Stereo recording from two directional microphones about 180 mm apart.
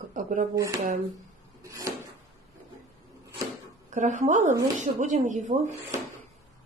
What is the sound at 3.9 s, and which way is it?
Speech, 40° right (ahead or behind).